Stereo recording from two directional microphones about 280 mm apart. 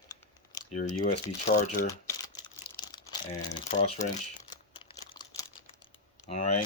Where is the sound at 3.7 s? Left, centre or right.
Centre.